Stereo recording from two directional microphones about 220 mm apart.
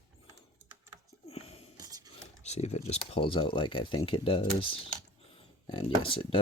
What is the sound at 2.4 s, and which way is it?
Speech, 30° left (ahead or behind).